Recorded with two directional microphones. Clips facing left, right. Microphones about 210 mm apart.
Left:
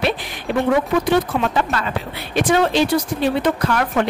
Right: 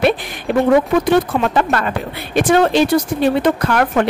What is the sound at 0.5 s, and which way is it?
Speech, 55° right (ahead or behind).